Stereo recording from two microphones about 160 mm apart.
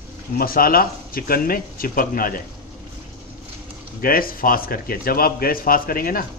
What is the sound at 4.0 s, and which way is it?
A man's voice, 65° left (ahead or behind).